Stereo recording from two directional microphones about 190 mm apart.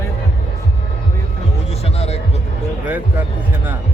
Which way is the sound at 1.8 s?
35° left (ahead or behind).